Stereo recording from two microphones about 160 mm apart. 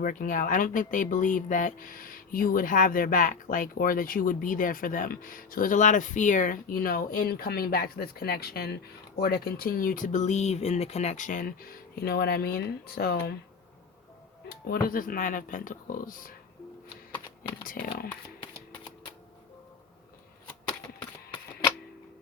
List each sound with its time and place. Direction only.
0.0 s speech: 55° left (ahead or behind); by 13.3 s 75° left (ahead or behind)
14.5 s speech: 65° left (ahead or behind)
17.6 s speech: 60° left (ahead or behind)